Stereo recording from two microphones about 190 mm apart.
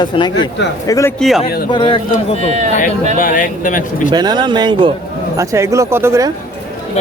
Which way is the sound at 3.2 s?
45° left (ahead or behind).